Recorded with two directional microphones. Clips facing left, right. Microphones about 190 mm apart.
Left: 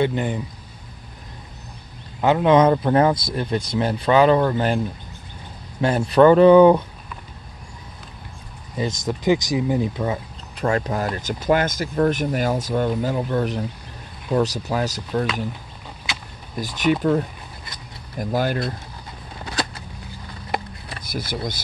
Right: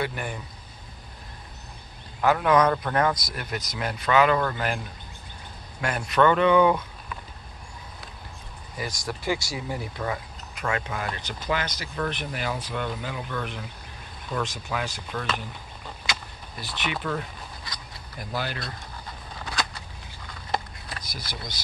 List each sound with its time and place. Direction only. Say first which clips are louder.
0.0 s speech: left 9 dB; 20° left (ahead or behind)
2.2 s speech: left 5 dB; 25° left (ahead or behind)
5.8 s speech: left 8 dB; 30° left (ahead or behind)
8.7 s speech: left 8 dB; 25° left (ahead or behind)
10.6 s speech: left 8 dB; 40° left (ahead or behind)
16.5 s speech: left 12 dB; 45° left (ahead or behind)
18.2 s speech: left 10 dB; 45° left (ahead or behind)
21.1 s speech: left 15 dB; 55° left (ahead or behind)